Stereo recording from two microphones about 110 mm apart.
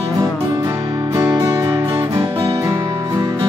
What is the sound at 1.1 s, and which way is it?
Music, 35° right (ahead or behind).